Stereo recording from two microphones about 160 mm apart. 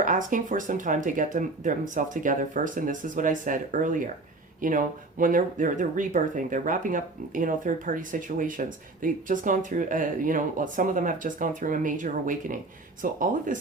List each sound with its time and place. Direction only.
0.0 s speech: 55° right (ahead or behind)